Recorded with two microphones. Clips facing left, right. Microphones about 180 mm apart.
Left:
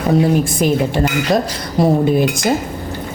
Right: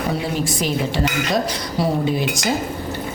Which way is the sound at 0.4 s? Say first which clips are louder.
Left 6 dB; 50° left (ahead or behind).